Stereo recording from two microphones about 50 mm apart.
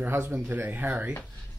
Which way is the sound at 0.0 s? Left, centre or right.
Right.